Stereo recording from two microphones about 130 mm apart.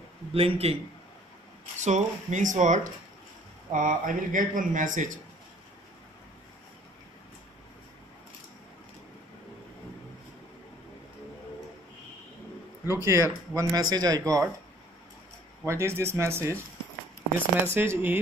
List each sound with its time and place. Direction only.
0.3 s a man's voice: 50° right (ahead or behind)
1.8 s speech: 65° right (ahead or behind)
3.7 s speech: 85° right
12.8 s speech: 20° right (ahead or behind)
15.6 s speech: 20° right (ahead or behind)
17.7 s speech: 15° right (ahead or behind)